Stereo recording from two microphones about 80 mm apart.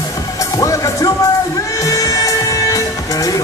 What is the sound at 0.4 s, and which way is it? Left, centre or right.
Music, left.